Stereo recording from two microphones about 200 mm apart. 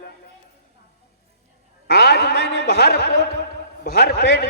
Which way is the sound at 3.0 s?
50° left (ahead or behind).